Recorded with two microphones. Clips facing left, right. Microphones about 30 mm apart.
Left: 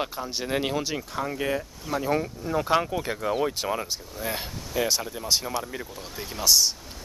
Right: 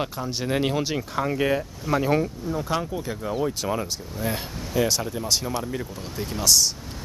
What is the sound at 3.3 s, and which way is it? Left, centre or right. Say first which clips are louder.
Speech: even; left.